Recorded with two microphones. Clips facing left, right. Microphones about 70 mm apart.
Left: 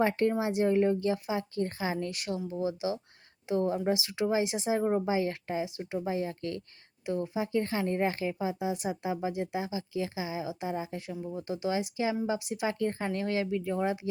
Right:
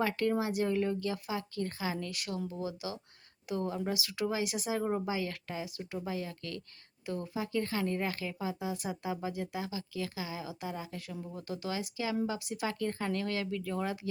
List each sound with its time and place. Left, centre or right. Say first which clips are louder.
0.0 s a woman's voice: left 4 dB; left
11.1 s speech: left 5 dB; centre
11.3 s a woman's voice: left 6 dB; left